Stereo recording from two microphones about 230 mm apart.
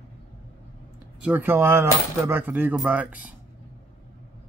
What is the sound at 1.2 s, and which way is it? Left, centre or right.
Speech, centre.